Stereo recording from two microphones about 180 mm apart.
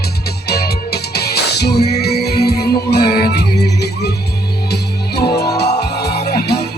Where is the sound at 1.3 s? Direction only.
65° left (ahead or behind).